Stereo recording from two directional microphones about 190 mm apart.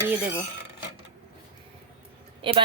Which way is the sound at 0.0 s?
15° right (ahead or behind).